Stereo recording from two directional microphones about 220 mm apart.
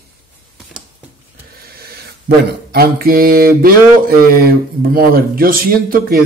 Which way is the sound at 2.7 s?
40° right (ahead or behind).